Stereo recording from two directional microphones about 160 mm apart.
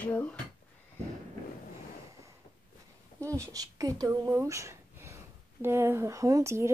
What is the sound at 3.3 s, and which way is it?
Speech, 20° right (ahead or behind).